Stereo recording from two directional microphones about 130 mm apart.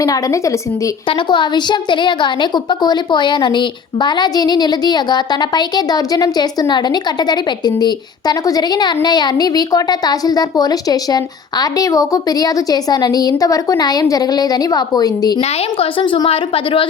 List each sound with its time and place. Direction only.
0.0 s a woman's voice: 25° left (ahead or behind)
1.0 s a woman's voice: 40° left (ahead or behind)
15.4 s a woman's voice: 45° left (ahead or behind)